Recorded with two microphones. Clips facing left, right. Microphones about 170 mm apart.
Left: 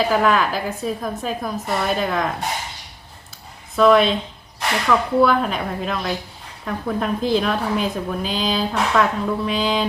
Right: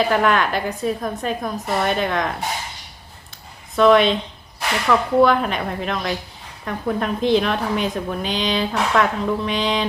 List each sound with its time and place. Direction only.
0.0 s a woman's voice: centre (ahead or behind)
3.8 s a woman's voice: centre (ahead or behind)